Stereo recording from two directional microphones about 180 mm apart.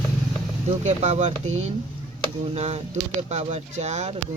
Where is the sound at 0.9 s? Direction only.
40° right (ahead or behind).